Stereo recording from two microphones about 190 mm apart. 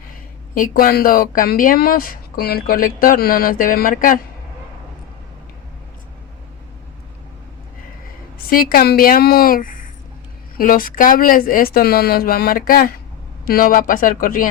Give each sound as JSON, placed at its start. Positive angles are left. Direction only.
{"t": 0.5, "sound": "speech", "side_deg": 45}
{"t": 8.4, "sound": "speech", "side_deg": 50}